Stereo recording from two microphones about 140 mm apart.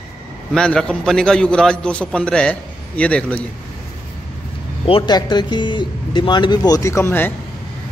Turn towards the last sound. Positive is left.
turn(degrees=15)  # may be behind; listen again after turning